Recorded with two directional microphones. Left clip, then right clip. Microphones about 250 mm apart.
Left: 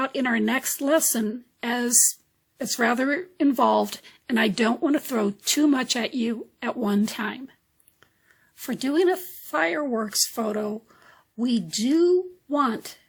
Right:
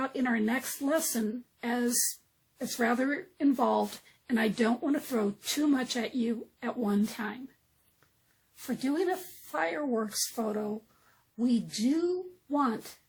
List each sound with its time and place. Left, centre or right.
0.0 s speech: left
8.6 s speech: left